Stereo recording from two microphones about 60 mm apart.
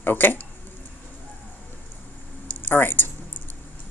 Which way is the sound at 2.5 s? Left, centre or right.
Left.